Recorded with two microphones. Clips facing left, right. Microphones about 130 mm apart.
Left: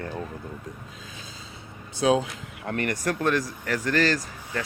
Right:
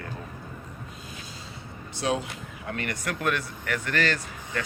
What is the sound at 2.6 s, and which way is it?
Speech, 50° left (ahead or behind).